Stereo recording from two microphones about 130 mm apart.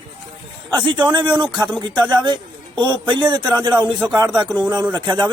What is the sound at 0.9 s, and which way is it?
A man's voice, 35° right (ahead or behind).